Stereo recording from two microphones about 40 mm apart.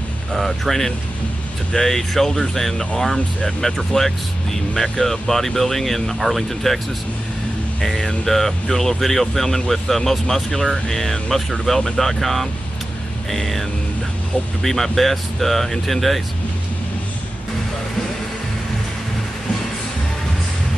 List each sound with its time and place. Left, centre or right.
0.3 s speech: centre
7.8 s speech: centre